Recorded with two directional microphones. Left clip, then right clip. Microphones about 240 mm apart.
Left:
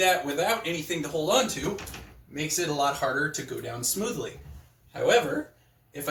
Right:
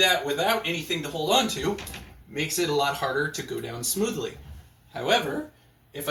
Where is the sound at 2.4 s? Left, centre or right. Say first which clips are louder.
Right 2 dB; centre.